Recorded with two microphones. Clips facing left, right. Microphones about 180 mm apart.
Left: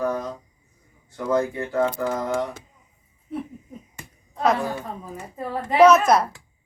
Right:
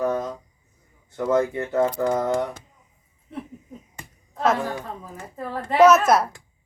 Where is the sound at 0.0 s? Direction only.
20° right (ahead or behind).